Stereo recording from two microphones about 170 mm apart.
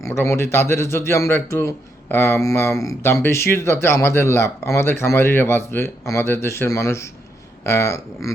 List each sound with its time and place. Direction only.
0.0 s a man's voice: 15° left (ahead or behind)